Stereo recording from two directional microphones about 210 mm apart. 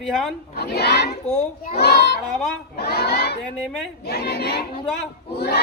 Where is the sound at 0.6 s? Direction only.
50° left (ahead or behind).